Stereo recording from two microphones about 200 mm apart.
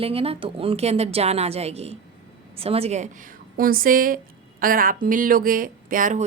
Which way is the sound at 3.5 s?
45° right (ahead or behind).